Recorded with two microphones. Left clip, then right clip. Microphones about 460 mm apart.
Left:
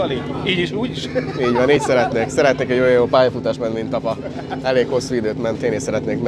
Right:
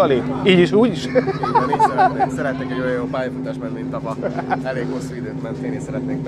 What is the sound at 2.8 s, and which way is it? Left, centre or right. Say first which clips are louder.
Speech: left 9 dB; left.